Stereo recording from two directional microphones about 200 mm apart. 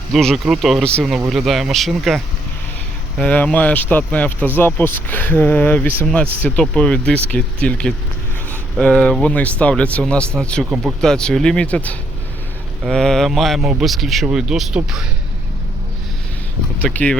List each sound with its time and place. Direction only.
0.1 s speech: centre (ahead or behind)
16.8 s speech: 5° left (ahead or behind)